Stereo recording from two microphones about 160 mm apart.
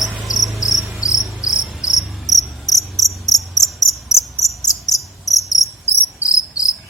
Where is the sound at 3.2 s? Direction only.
25° left (ahead or behind).